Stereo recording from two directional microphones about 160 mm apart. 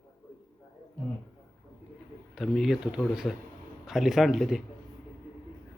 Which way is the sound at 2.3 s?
5° right (ahead or behind).